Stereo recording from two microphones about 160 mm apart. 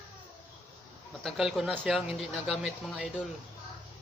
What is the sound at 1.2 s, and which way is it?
Speech, centre (ahead or behind).